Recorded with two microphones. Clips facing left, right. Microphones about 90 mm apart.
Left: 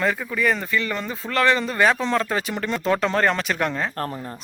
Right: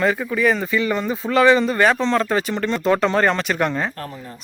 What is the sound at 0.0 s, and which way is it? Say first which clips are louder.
Speech: right 4 dB; 5° right (ahead or behind).